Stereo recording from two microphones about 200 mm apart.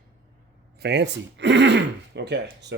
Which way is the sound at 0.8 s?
60° right (ahead or behind).